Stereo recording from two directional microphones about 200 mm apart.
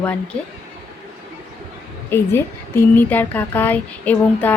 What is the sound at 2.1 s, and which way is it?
Speech, 10° left (ahead or behind).